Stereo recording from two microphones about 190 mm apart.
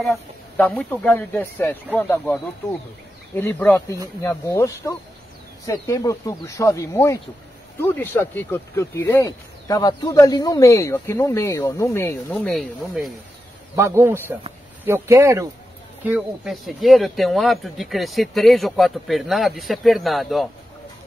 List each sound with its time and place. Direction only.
0.0 s speech: 5° left (ahead or behind)
12.4 s speech: centre (ahead or behind)
13.7 s a man's voice: 10° right (ahead or behind)
16.1 s speech: 5° right (ahead or behind)